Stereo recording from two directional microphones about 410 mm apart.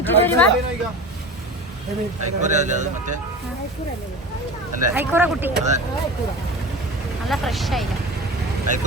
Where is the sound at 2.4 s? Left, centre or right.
Centre.